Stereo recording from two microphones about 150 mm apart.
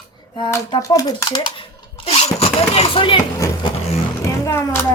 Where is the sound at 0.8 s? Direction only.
25° left (ahead or behind).